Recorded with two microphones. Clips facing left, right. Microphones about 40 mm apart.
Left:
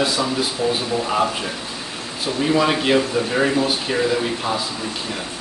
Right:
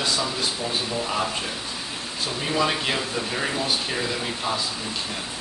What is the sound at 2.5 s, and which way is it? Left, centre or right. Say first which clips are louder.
Speech: left 6 dB; centre.